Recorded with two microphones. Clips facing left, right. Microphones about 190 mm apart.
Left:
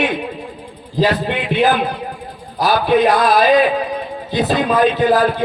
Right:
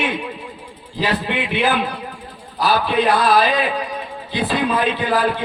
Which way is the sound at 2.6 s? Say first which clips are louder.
Left 4 dB; 45° left (ahead or behind).